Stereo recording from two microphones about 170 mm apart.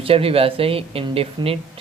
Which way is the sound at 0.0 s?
35° right (ahead or behind).